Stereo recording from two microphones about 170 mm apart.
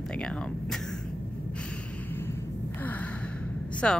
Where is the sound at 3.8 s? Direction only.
5° left (ahead or behind).